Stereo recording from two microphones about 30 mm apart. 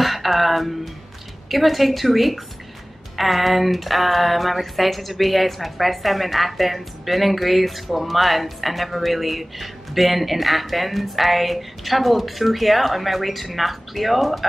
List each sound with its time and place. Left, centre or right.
0.0 s speech: centre